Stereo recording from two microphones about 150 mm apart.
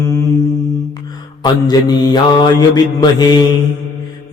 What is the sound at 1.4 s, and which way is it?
Mantra, 25° left (ahead or behind).